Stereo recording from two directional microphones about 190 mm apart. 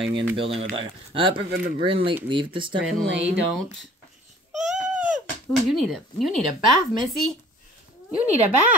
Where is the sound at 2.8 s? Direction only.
Centre (ahead or behind).